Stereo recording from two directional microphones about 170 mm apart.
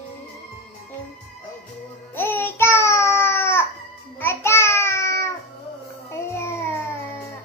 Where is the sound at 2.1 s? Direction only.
10° left (ahead or behind).